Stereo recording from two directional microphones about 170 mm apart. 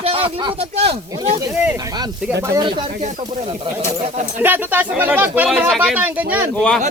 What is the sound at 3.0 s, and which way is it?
Speech, 40° right (ahead or behind).